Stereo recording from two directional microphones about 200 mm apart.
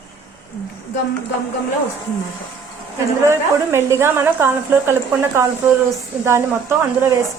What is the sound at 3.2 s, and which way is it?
Speech, 15° right (ahead or behind).